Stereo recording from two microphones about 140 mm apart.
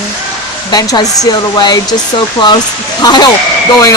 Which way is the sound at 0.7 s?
25° left (ahead or behind).